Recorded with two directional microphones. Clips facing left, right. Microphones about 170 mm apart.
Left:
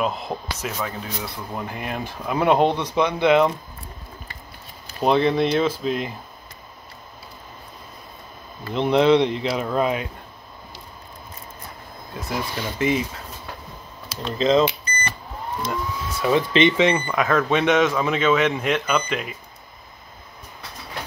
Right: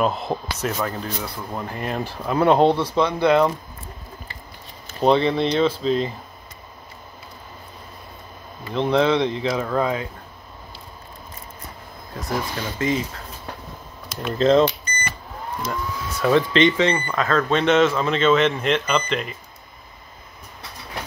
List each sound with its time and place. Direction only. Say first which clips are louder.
0.0 s speech: right 3 dB; centre (ahead or behind); by 3.4 s 20° left (ahead or behind)
5.0 s speech: right 1 dB; 5° left (ahead or behind)
8.7 s speech: left 2 dB; 15° left (ahead or behind)
12.7 s speech: left 1 dB; 15° left (ahead or behind)
14.2 s speech: right 2 dB; 5° right (ahead or behind)
15.7 s speech: left 1 dB; 5° left (ahead or behind)